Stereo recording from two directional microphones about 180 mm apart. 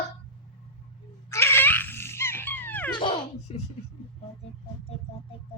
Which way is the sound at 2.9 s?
30° left (ahead or behind).